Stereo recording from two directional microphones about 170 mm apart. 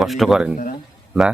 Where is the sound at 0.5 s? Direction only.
55° left (ahead or behind).